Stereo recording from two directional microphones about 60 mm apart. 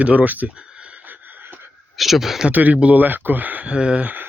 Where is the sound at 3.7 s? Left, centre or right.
Centre.